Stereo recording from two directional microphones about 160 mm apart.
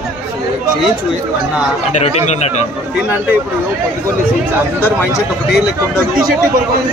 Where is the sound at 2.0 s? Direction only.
45° left (ahead or behind).